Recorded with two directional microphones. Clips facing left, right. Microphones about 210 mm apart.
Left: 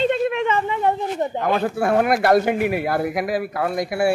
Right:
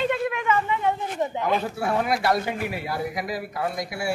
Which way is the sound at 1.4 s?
55° left (ahead or behind).